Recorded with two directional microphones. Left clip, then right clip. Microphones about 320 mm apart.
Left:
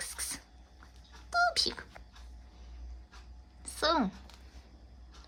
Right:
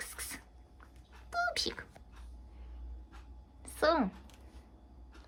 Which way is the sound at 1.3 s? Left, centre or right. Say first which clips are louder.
Left 5 dB; centre.